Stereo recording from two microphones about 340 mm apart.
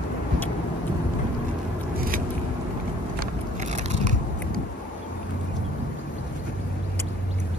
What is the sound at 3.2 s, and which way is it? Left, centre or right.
Biting, centre.